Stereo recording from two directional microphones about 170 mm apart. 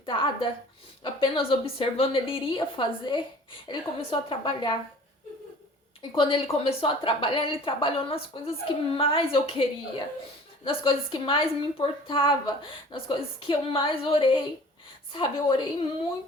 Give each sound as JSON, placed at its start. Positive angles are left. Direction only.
{"t": 0.0, "sound": "a woman's voice", "side_deg": 30}
{"t": 6.0, "sound": "a woman's voice", "side_deg": 30}